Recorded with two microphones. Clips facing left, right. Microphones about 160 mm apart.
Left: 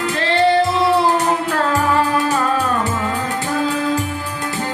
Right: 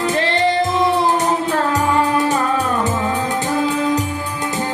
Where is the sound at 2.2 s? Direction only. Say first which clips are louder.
Even; 20° right (ahead or behind).